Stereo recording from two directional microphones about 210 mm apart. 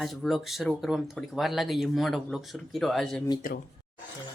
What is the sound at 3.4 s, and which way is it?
Speech, 40° left (ahead or behind).